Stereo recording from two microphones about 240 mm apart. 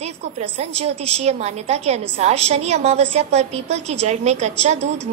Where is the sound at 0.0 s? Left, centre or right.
Right.